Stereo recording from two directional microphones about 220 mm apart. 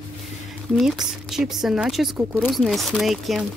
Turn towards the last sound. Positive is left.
turn(degrees=0)  # may be behind; listen again after turning